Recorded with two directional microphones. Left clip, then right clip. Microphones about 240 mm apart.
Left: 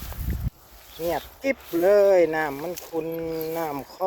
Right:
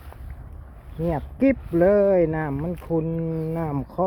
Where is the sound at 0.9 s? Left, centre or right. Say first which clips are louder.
Right 1 dB; centre.